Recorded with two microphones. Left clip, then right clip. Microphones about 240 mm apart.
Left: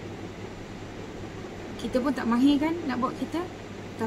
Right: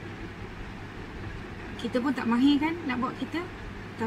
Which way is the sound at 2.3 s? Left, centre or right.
Centre.